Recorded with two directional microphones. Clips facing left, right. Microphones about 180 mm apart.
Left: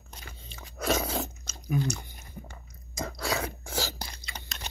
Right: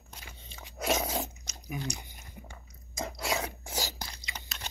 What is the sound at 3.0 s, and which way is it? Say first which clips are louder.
Chewing: left 1 dB; 20° right (ahead or behind).